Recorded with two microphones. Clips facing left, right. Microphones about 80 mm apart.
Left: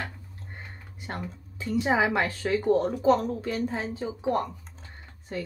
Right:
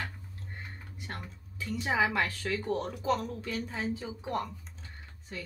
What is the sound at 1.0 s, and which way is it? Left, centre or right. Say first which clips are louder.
A woman's voice: left 7 dB; left.